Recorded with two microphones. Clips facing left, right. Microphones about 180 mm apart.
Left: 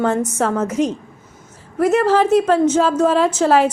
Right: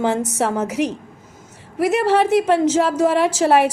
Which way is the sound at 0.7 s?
70° right (ahead or behind).